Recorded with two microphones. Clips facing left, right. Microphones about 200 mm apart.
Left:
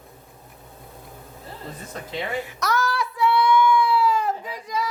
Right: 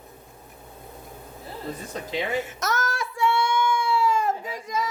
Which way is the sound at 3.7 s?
25° right (ahead or behind).